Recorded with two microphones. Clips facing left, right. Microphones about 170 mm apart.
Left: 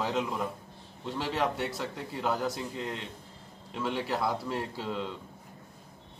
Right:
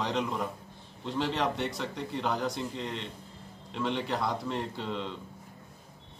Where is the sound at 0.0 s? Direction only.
5° left (ahead or behind).